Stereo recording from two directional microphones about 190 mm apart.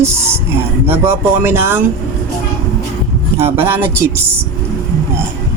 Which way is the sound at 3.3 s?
10° right (ahead or behind).